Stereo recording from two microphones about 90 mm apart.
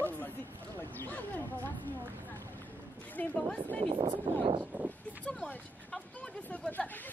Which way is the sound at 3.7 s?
80° right.